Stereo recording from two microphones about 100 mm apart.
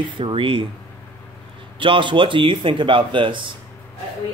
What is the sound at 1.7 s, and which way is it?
Speech, 60° right (ahead or behind).